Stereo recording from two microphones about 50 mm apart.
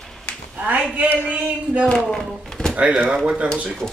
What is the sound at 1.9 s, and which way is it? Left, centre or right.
Speech, centre.